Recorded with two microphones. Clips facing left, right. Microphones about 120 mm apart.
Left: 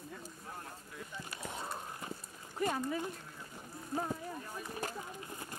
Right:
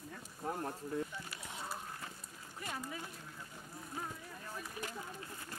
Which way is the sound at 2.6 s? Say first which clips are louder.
Left 10 dB; 45° left (ahead or behind).